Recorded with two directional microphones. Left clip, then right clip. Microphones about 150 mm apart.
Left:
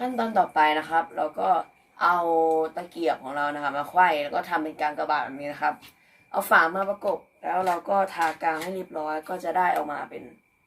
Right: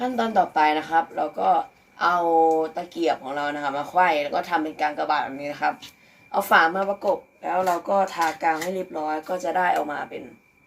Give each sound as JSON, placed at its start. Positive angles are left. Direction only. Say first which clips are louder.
{"t": 0.0, "sound": "speech", "louder": "right 2 dB", "side_deg": 5}